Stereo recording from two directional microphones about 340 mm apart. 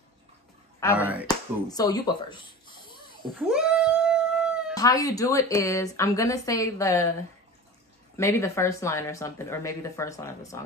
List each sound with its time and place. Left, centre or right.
0.9 s speech: centre
1.2 s speech: centre
3.2 s cat: centre
4.7 s speech: centre
8.2 s speech: centre